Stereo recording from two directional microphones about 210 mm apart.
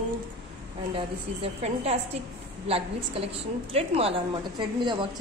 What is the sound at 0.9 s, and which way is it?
A woman's voice, 30° right (ahead or behind).